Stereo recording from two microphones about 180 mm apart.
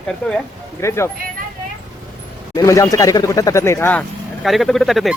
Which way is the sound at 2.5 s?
20° left (ahead or behind).